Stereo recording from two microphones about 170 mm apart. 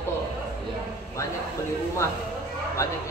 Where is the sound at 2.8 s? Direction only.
15° left (ahead or behind).